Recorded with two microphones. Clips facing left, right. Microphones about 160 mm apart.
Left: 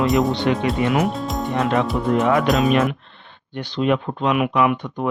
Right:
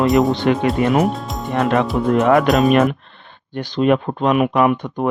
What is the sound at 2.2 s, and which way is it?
Speech, 55° right (ahead or behind).